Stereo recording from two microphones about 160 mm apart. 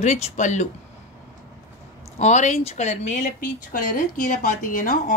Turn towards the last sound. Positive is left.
turn(degrees=60)  # may be behind; listen again after turning